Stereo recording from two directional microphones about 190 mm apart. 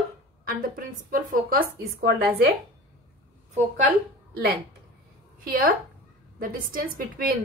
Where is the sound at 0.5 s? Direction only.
45° right (ahead or behind).